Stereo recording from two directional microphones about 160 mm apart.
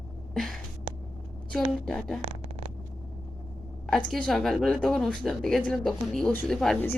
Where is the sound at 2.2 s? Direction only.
40° right (ahead or behind).